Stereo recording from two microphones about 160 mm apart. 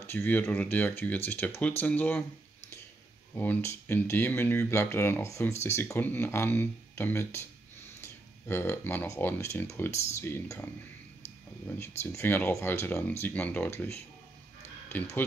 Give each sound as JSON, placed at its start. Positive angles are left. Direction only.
{"t": 0.0, "sound": "speech", "side_deg": 15}
{"t": 3.3, "sound": "speech", "side_deg": 15}
{"t": 12.0, "sound": "speech", "side_deg": 15}